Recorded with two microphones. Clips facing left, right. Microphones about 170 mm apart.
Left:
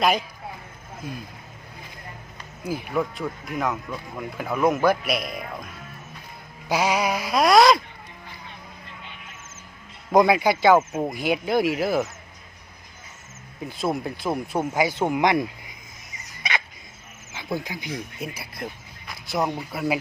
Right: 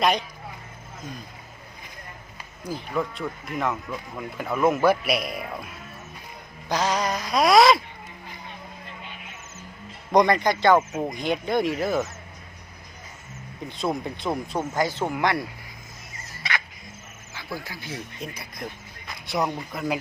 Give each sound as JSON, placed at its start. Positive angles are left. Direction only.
{"t": 0.0, "sound": "speech", "side_deg": 5}
{"t": 2.6, "sound": "speech", "side_deg": 5}
{"t": 6.7, "sound": "speech", "side_deg": 10}
{"t": 10.1, "sound": "speech", "side_deg": 5}
{"t": 13.6, "sound": "speech", "side_deg": 5}
{"t": 16.1, "sound": "fowl", "side_deg": 20}
{"t": 17.3, "sound": "speech", "side_deg": 20}